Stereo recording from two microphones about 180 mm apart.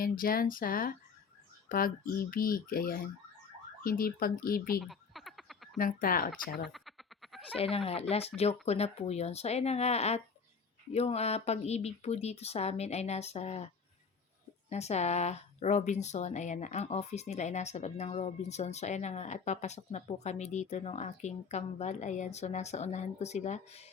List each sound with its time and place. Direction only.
0.0 s speech: 50° left (ahead or behind)
4.8 s frog: centre (ahead or behind)
5.7 s speech: 50° left (ahead or behind)
6.7 s a sound: centre (ahead or behind)
7.5 s speech: 35° left (ahead or behind)
14.7 s speech: 35° left (ahead or behind)